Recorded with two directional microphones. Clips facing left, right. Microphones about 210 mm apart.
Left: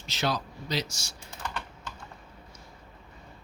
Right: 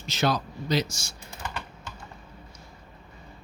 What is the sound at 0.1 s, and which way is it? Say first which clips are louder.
Speech: right 4 dB; 45° right (ahead or behind).